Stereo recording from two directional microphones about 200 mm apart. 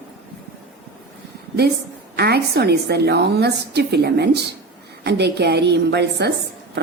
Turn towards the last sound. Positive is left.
turn(degrees=-55)  # may be behind; listen again after turning